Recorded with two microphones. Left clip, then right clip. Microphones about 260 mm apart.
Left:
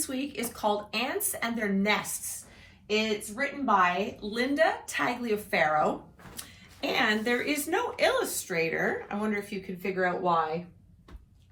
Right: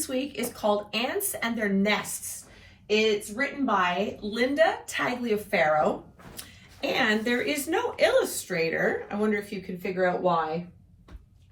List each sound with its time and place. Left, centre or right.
0.0 s speech: left